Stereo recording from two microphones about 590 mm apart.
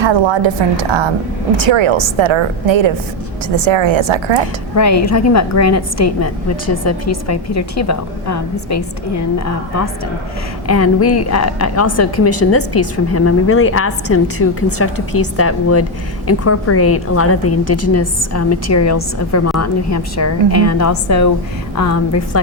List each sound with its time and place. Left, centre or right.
0.0 s a woman's voice: right
4.8 s a woman's voice: left
10.7 s a woman's voice: left